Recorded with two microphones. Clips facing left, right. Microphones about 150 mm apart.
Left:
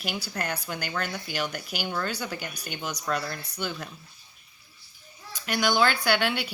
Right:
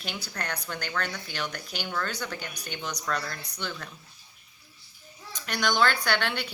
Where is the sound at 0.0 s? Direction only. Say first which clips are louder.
Left 4 dB; 10° left (ahead or behind).